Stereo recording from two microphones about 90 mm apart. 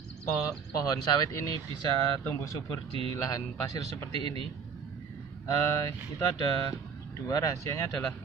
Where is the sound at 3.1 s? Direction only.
40° left (ahead or behind).